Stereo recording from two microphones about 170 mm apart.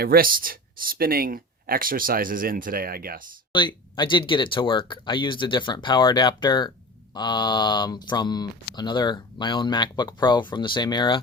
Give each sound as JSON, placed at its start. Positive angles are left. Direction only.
{"t": 0.0, "sound": "speech", "side_deg": -60}
{"t": 3.5, "sound": "speech", "side_deg": 25}